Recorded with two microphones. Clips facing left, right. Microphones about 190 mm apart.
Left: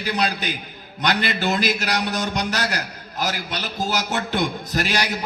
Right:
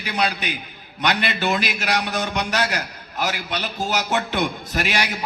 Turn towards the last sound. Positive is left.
turn(degrees=40)  # may be behind; listen again after turning